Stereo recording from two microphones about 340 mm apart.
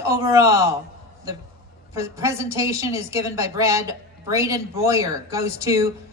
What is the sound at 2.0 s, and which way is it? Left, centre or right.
A woman's voice, centre.